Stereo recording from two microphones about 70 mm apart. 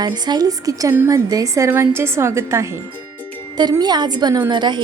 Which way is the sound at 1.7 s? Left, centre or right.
Right.